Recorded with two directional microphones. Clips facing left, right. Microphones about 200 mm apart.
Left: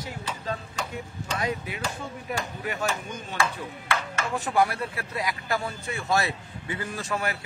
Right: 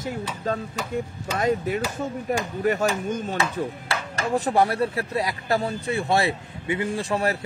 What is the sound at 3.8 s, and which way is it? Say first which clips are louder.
Speech: right 2 dB; 35° right (ahead or behind).